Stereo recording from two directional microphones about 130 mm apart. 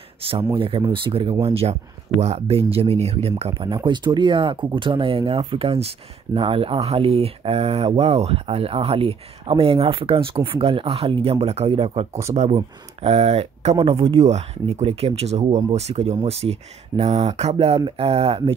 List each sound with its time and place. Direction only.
0.2 s speech: 45° right (ahead or behind)
3.6 s speech: 35° right (ahead or behind)